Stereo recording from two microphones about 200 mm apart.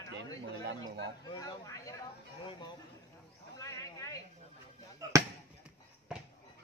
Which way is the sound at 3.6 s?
15° left (ahead or behind).